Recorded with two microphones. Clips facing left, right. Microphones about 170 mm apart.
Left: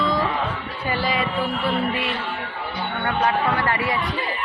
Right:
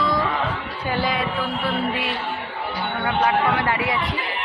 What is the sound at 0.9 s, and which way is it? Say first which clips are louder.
Music: even; 5° left (ahead or behind).